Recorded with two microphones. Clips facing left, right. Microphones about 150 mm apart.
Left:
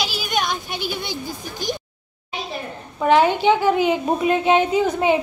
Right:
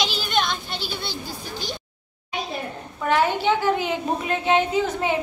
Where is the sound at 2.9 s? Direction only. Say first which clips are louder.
Left 5 dB; 20° left (ahead or behind).